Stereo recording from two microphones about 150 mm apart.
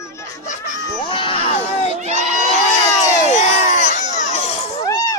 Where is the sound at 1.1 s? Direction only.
35° left (ahead or behind).